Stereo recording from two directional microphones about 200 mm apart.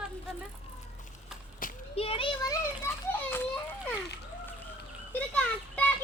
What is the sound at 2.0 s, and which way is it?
A child's voice, 30° left (ahead or behind).